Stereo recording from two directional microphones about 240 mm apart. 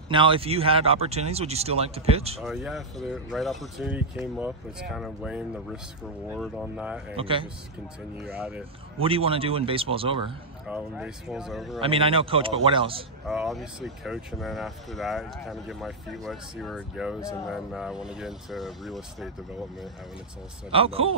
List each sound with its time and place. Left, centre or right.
0.1 s speech: right
2.4 s speech: centre
7.2 s speech: right
8.3 s speech: centre
9.0 s speech: right
10.7 s speech: centre
11.8 s speech: right
13.3 s speech: centre
20.7 s speech: right